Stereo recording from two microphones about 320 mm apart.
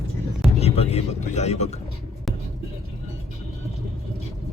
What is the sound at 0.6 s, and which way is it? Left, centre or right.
Speech, centre.